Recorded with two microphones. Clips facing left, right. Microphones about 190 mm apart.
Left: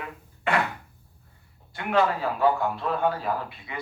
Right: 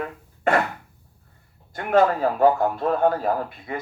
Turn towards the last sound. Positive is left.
turn(degrees=-45)  # may be behind; listen again after turning